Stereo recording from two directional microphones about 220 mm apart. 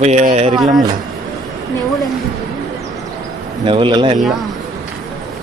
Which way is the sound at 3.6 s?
20° right (ahead or behind).